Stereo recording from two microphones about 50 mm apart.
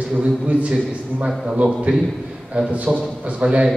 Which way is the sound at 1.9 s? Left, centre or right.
Right.